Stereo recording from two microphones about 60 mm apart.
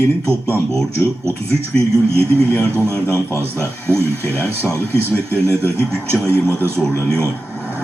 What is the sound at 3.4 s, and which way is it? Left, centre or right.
Speech, right.